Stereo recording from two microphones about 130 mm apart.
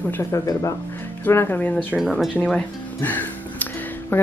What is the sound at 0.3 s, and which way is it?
Speech, 25° left (ahead or behind).